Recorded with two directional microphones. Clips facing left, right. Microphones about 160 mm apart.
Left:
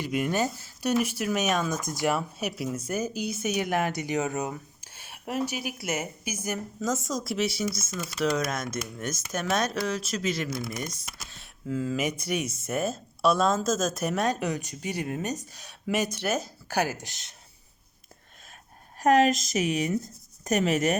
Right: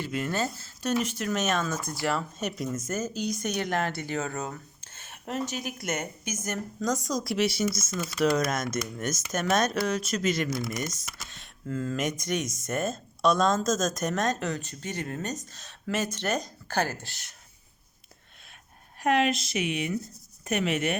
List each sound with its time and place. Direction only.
0.0 s speech: 15° left (ahead or behind)
19.0 s a woman's voice: 40° left (ahead or behind)